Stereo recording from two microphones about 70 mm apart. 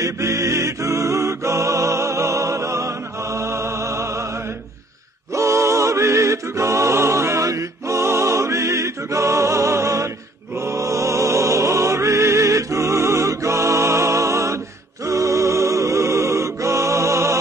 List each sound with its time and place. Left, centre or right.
0.0 s music: right
5.3 s music: right